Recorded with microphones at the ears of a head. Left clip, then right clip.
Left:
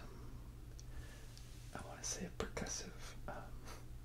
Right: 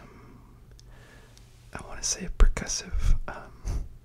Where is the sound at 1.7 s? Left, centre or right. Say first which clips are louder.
Right 14 dB; right.